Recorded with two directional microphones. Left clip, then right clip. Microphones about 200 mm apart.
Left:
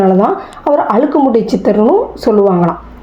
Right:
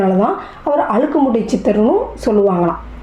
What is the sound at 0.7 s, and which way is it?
Speech, 5° left (ahead or behind).